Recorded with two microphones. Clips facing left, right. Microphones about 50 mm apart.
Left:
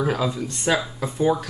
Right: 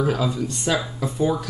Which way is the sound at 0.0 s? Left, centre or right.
Centre.